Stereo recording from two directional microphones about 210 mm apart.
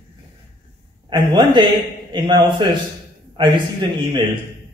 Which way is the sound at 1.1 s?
20° right (ahead or behind).